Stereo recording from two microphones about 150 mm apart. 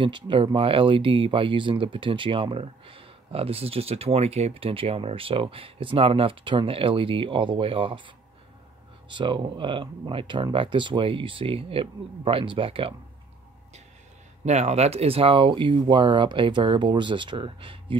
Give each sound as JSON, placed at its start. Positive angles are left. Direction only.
{"t": 0.0, "sound": "speech", "side_deg": -35}
{"t": 9.1, "sound": "speech", "side_deg": -30}
{"t": 14.4, "sound": "speech", "side_deg": -50}